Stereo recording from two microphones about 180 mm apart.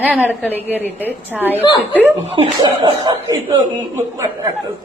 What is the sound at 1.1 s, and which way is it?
Speech, 10° right (ahead or behind).